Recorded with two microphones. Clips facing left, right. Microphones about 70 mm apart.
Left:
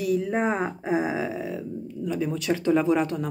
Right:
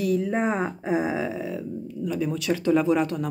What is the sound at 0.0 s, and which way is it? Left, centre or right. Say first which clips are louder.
A woman's voice: even; centre.